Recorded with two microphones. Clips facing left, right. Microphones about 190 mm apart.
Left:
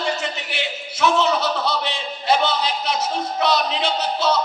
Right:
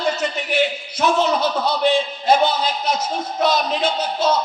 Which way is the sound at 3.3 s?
45° right (ahead or behind).